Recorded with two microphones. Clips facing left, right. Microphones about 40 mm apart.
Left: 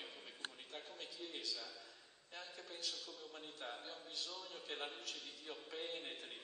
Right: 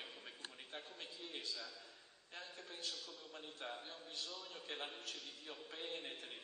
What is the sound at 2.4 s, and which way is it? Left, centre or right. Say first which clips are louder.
Speech: even; right.